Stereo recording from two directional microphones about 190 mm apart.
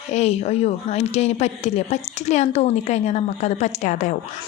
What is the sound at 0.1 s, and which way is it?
A woman's voice, 35° left (ahead or behind).